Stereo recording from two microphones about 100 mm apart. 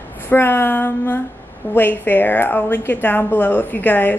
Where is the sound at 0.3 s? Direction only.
20° left (ahead or behind).